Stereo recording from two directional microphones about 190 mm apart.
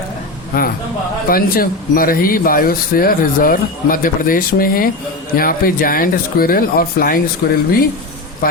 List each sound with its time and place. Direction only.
0.5 s speech: 50° left (ahead or behind)